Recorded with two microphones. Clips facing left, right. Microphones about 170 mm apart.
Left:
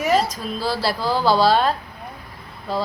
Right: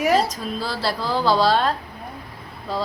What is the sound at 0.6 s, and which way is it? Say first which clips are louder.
A woman's voice: left 4 dB; 5° left (ahead or behind).